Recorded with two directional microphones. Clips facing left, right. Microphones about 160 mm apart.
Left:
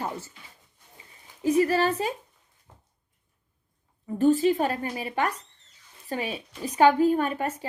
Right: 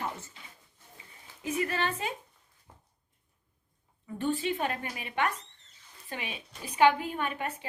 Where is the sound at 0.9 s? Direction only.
35° left (ahead or behind).